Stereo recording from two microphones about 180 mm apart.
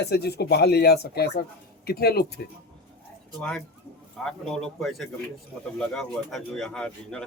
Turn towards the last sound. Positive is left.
turn(degrees=5)  # may be behind; listen again after turning